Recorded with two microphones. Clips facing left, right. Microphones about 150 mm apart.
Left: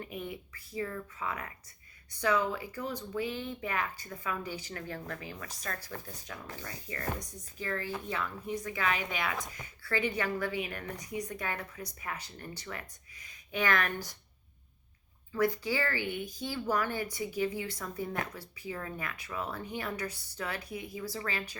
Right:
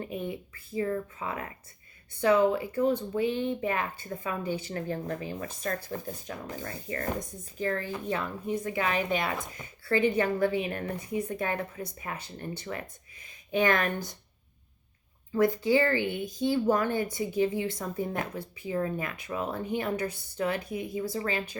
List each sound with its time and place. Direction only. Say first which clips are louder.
0.0 s speech: right 6 dB; 30° right (ahead or behind)
6.6 s a woman's voice: right 7 dB; 50° right (ahead or behind)
8.0 s a woman's voice: right 5 dB; 30° right (ahead or behind); by 9.2 s 45° right (ahead or behind)
9.5 s speech: right 7 dB; 25° right (ahead or behind)
15.3 s speech: right 6 dB; 25° right (ahead or behind)